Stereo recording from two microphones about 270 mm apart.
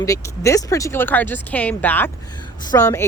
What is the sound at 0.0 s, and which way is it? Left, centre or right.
Speech, centre.